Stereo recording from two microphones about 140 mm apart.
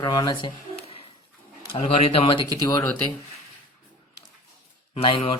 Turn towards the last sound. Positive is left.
turn(degrees=40)  # may be behind; listen again after turning